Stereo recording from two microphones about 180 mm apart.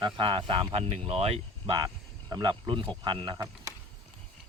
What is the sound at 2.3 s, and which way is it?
Speech, 25° right (ahead or behind).